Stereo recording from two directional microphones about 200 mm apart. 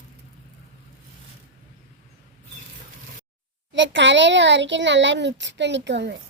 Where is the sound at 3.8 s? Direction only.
65° right (ahead or behind).